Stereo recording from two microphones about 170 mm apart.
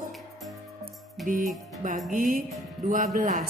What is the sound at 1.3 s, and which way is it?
Speech, 50° right (ahead or behind).